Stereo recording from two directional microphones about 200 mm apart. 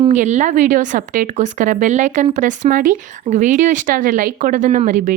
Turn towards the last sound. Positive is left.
turn(degrees=-40)  # may be behind; listen again after turning